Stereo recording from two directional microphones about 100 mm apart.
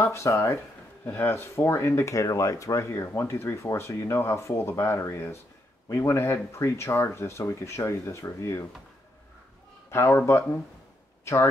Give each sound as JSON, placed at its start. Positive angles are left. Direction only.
{"t": 0.0, "sound": "speech", "side_deg": 30}
{"t": 9.8, "sound": "speech", "side_deg": 25}